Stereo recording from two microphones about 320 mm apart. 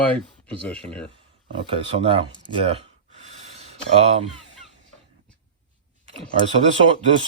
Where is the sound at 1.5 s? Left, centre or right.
Centre.